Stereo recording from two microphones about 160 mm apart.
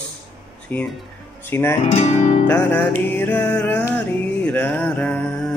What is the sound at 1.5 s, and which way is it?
Music, 15° left (ahead or behind).